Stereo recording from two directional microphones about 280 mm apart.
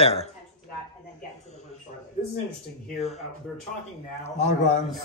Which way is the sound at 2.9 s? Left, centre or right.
Left.